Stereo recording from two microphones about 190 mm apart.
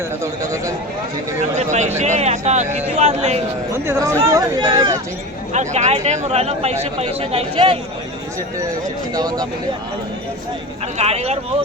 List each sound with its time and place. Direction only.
1.5 s speech: 40° right (ahead or behind)
3.7 s speech: 15° right (ahead or behind)
5.5 s speech: 35° right (ahead or behind)
9.1 s speech: 20° right (ahead or behind)
10.9 s speech: 35° right (ahead or behind)